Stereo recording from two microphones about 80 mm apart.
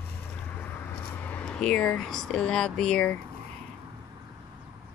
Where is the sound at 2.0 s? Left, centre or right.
Centre.